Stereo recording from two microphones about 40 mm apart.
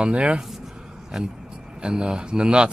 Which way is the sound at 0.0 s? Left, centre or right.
Right.